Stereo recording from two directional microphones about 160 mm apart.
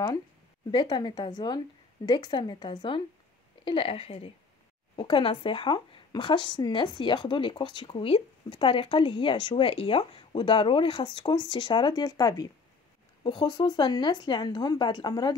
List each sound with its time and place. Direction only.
0.7 s speech: 30° left (ahead or behind)